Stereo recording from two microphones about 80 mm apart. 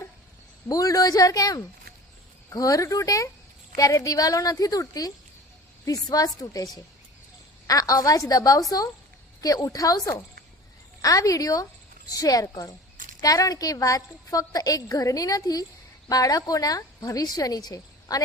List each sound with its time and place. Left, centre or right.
0.7 s a woman's voice: left
7.7 s a woman's voice: left